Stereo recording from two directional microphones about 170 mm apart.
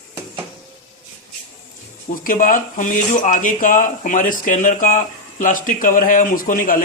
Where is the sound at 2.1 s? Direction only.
55° left (ahead or behind).